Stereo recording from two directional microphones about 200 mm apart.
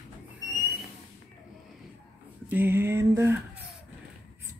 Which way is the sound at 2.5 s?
10° right (ahead or behind).